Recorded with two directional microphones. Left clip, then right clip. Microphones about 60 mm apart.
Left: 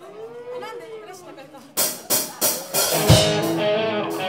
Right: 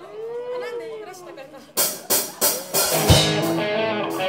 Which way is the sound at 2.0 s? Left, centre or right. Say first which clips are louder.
Right 1 dB; centre.